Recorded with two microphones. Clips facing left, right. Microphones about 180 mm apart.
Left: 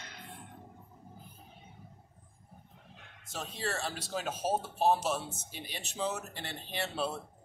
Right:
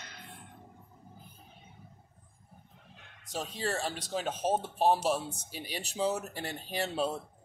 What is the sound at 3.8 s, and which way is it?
Speech, 5° left (ahead or behind).